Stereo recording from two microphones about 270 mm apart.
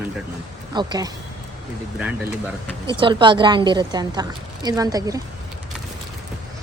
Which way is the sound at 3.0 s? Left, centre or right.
Centre.